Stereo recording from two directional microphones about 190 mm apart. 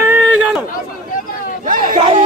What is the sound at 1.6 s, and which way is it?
Chatter, 45° right (ahead or behind).